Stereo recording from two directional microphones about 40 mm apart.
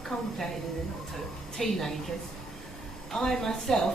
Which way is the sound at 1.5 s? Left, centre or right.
Centre.